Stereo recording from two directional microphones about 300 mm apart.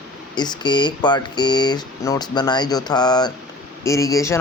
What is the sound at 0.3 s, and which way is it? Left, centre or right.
Speech, centre.